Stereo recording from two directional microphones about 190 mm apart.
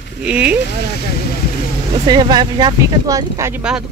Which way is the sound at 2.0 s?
20° right (ahead or behind).